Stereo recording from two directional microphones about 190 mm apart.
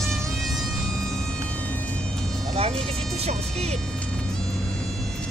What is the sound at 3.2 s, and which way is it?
Speech, 35° right (ahead or behind).